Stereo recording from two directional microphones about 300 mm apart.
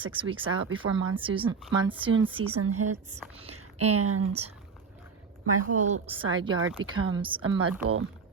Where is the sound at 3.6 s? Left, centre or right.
Right.